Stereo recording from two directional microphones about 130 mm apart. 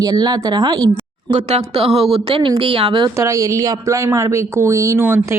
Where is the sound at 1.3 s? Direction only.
55° right (ahead or behind).